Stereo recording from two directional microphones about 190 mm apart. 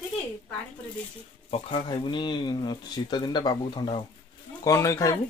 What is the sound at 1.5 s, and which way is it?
Speech, 30° left (ahead or behind).